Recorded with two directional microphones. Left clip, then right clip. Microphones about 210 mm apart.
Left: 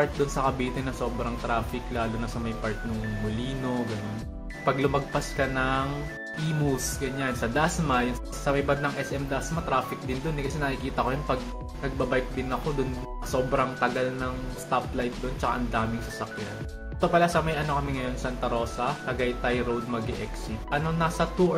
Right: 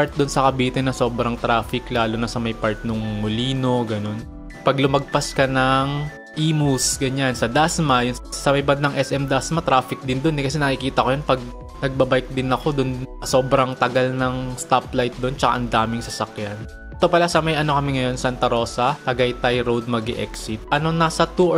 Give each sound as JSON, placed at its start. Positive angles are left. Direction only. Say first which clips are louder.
{"t": 0.0, "sound": "speech", "louder": "right 7 dB", "side_deg": -45}
{"t": 7.0, "sound": "speech", "louder": "right 8 dB", "side_deg": -45}